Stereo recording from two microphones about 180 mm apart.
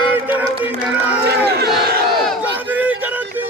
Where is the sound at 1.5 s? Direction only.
60° right (ahead or behind).